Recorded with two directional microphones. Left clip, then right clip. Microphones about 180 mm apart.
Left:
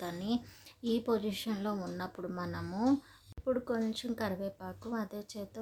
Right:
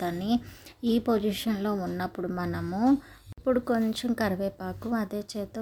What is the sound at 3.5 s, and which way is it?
A woman's voice, 30° right (ahead or behind).